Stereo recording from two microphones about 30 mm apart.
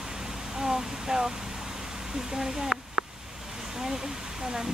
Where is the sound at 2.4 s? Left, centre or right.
Centre.